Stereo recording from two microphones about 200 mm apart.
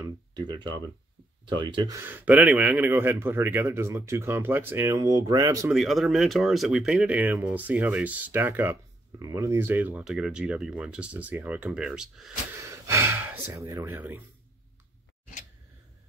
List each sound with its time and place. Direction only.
0.0 s a sound: 20° right (ahead or behind)
1.4 s speech: 25° right (ahead or behind)
5.7 s speech: centre (ahead or behind)
12.6 s speech: 15° right (ahead or behind)